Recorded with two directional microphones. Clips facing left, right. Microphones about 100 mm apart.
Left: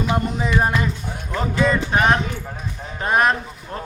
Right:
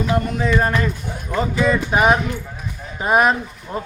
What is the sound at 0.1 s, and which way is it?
Speech, 15° left (ahead or behind).